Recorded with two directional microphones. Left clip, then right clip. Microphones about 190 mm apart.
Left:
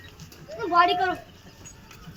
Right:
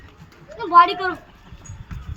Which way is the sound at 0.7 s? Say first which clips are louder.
Right 7 dB; 40° right (ahead or behind).